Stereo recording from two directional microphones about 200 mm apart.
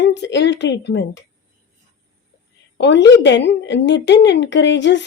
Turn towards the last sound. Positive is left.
turn(degrees=60)  # may be behind; listen again after turning